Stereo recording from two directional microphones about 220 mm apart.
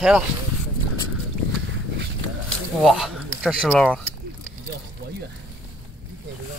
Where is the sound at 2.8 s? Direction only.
Centre (ahead or behind).